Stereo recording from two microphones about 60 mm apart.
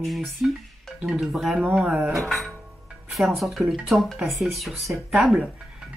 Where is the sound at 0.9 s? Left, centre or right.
Centre.